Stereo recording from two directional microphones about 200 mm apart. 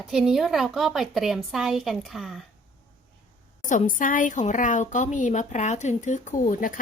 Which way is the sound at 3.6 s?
40° left (ahead or behind).